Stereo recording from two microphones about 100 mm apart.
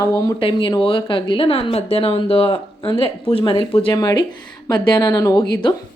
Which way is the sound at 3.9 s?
40° left (ahead or behind).